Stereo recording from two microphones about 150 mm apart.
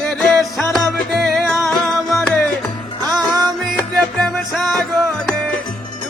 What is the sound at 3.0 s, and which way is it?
Music, 25° right (ahead or behind).